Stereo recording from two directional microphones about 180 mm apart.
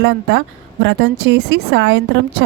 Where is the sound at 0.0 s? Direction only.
80° right.